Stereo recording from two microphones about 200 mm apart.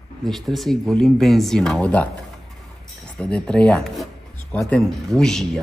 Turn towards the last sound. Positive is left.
turn(degrees=0)  # may be behind; listen again after turning